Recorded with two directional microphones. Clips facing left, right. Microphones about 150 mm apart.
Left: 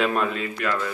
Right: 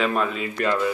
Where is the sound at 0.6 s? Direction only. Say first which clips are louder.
Right 4 dB; 45° right (ahead or behind).